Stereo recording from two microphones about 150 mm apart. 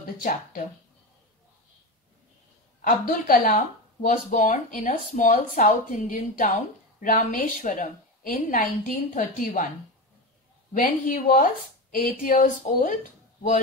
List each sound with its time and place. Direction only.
0.0 s speech: 65° left (ahead or behind)
2.8 s speech: 65° left (ahead or behind)
10.7 s speech: 65° left (ahead or behind)